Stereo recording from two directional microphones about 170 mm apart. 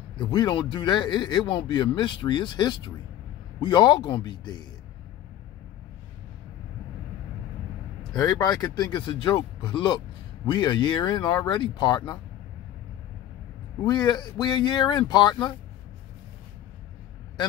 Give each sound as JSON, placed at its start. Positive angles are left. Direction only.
{"t": 0.1, "sound": "speech", "side_deg": 25}
{"t": 8.1, "sound": "speech", "side_deg": 20}
{"t": 13.8, "sound": "speech", "side_deg": 25}